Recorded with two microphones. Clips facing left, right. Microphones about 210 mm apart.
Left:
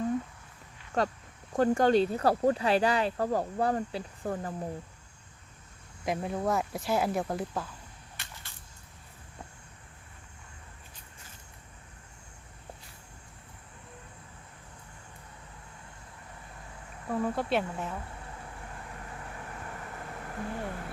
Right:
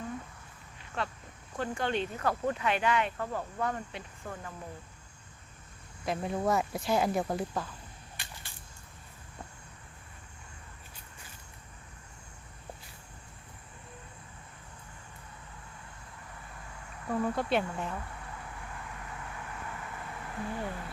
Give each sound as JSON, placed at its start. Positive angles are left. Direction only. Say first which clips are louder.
{"t": 0.9, "sound": "speech", "louder": "left 7 dB", "side_deg": 40}
{"t": 6.2, "sound": "speech", "louder": "right 2 dB", "side_deg": 0}
{"t": 8.1, "sound": "a sound", "louder": "even", "side_deg": -15}
{"t": 17.1, "sound": "speech", "louder": "even", "side_deg": 5}
{"t": 18.6, "sound": "vehicle", "louder": "even", "side_deg": 35}